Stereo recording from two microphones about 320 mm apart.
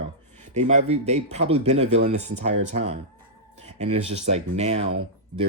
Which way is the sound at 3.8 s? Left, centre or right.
Centre.